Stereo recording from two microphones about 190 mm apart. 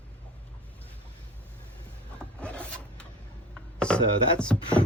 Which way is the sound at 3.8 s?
5° left (ahead or behind).